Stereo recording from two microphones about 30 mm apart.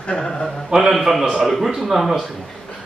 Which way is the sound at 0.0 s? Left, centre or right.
Left.